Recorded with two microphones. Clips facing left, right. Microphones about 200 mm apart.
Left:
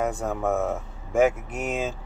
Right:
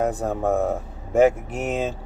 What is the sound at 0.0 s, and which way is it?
Speech, 35° right (ahead or behind).